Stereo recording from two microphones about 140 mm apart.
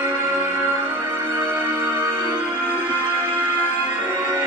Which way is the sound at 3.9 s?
15° right (ahead or behind).